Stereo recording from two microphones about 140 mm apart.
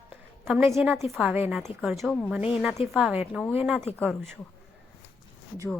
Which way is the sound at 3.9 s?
10° left (ahead or behind).